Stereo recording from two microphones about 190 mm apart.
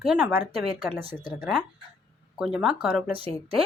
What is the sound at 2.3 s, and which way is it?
Speech, 5° right (ahead or behind).